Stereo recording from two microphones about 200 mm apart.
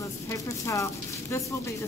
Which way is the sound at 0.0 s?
15° left (ahead or behind).